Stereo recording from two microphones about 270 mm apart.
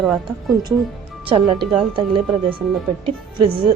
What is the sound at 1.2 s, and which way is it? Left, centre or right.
A woman's voice, centre.